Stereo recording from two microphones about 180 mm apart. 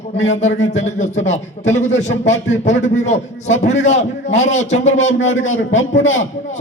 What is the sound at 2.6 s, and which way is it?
A man's voice, 40° left (ahead or behind).